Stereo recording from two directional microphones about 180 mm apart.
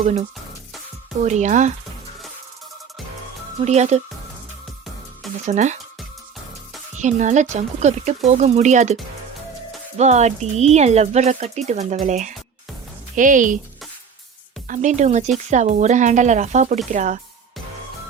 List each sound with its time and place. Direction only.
0.0 s speech: 35° right (ahead or behind)
3.6 s speech: 40° right (ahead or behind)
5.5 s speech: 40° right (ahead or behind)
6.9 s speech: 40° right (ahead or behind)
10.0 s speech: 40° right (ahead or behind)
14.7 s speech: 45° right (ahead or behind)